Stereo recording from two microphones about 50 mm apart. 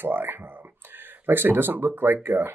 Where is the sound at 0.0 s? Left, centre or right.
Right.